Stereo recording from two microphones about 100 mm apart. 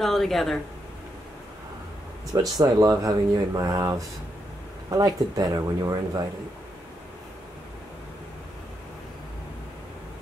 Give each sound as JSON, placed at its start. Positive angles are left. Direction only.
{"t": 0.0, "sound": "speech", "side_deg": 0}
{"t": 2.5, "sound": "speech", "side_deg": -45}
{"t": 4.9, "sound": "speech", "side_deg": -40}